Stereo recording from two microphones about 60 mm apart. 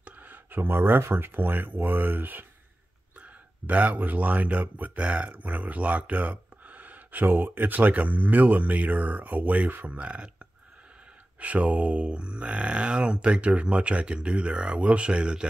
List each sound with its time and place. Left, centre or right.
0.0 s speech: right